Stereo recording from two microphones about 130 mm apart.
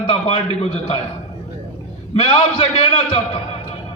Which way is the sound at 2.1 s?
50° left (ahead or behind).